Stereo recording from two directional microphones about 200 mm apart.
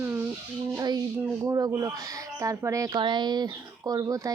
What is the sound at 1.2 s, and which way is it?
Speech, 15° right (ahead or behind).